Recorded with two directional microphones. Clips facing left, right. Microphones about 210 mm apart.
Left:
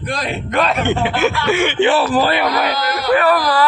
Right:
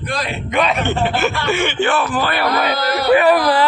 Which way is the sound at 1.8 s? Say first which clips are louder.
Left 6 dB; 30° left (ahead or behind).